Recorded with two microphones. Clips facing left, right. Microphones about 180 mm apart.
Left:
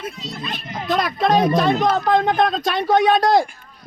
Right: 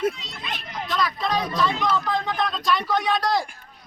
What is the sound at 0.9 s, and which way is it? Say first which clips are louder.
Speech: left 7 dB; 55° left (ahead or behind).